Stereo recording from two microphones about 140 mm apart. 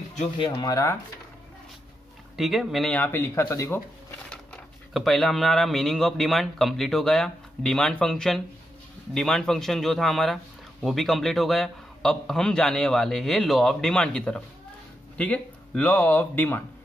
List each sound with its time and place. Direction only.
0.4 s speech: 30° left (ahead or behind)
2.3 s speech: centre (ahead or behind)
2.9 s speech: 15° left (ahead or behind)
4.9 s speech: centre (ahead or behind)